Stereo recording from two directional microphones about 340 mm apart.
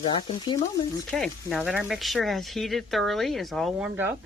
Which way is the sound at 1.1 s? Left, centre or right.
Centre.